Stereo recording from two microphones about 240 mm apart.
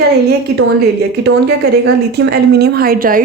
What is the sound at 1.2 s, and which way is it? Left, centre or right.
Speech, right.